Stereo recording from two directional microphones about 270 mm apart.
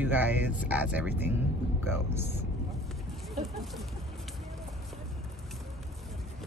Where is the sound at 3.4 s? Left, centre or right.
Centre.